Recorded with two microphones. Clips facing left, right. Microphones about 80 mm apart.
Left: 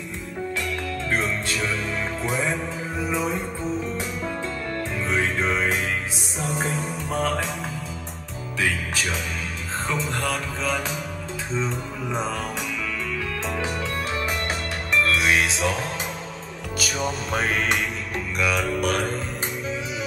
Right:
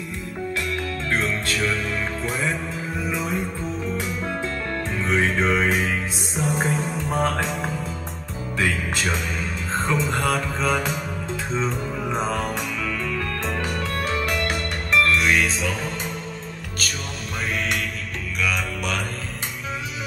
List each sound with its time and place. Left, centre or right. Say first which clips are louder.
2.2 s music: left 1 dB; centre
5.0 s music: right 3 dB; centre
9.8 s music: right 3 dB; centre
13.5 s music: right 1 dB; centre
16.7 s music: left 6 dB; centre
17.3 s music: left 1 dB; left
18.4 s music: left 2 dB; centre
18.8 s mantra: left 4 dB; left